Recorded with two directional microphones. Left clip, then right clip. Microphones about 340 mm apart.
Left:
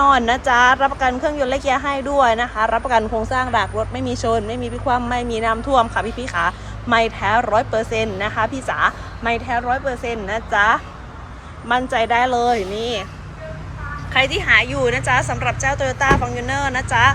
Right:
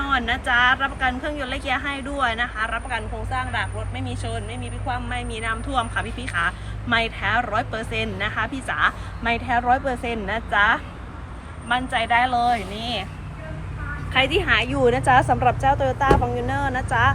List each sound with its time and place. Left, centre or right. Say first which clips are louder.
0.0 s a woman's voice: left 8 dB; centre
14.1 s a woman's voice: left 4 dB; centre